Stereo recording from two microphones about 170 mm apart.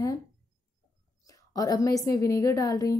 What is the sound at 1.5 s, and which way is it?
A woman's voice, 20° left (ahead or behind).